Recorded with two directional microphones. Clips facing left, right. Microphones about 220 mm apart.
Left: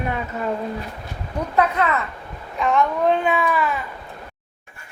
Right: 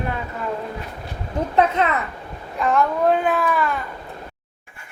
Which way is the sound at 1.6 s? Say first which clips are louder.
Right 1 dB; 20° right (ahead or behind).